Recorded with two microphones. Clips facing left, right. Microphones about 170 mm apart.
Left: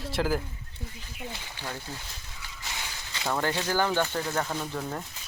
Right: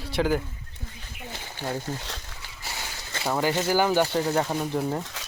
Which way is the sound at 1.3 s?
45° right (ahead or behind).